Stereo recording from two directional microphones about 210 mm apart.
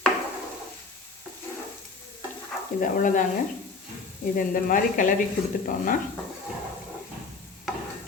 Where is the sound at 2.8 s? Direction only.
40° left (ahead or behind).